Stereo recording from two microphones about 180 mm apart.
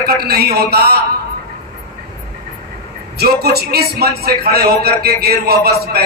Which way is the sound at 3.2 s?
60° right (ahead or behind).